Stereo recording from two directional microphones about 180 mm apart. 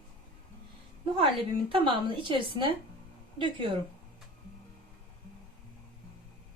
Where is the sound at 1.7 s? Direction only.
30° right (ahead or behind).